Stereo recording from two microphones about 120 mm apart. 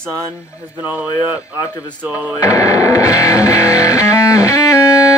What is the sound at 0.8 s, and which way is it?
Speech, 15° right (ahead or behind).